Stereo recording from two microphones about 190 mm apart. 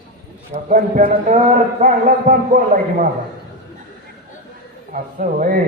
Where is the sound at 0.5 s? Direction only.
45° right (ahead or behind).